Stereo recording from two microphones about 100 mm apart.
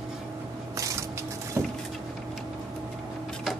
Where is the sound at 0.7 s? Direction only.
35° right (ahead or behind).